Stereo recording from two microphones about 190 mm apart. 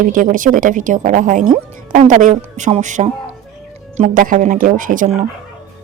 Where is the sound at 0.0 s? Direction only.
45° right (ahead or behind).